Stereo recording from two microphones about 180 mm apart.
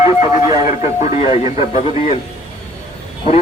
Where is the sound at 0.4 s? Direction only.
20° right (ahead or behind).